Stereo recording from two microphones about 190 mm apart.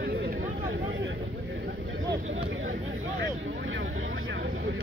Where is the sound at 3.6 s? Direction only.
75° right (ahead or behind).